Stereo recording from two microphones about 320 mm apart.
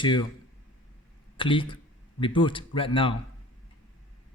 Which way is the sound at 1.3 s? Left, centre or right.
Centre.